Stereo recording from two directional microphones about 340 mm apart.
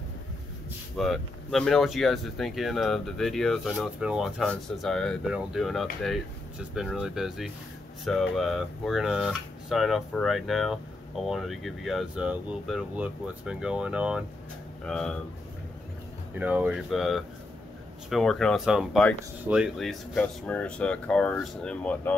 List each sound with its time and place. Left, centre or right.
0.9 s speech: centre
16.3 s speech: centre